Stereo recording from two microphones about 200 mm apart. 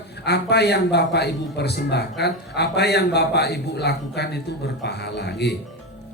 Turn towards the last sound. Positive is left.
turn(degrees=55)  # may be behind; listen again after turning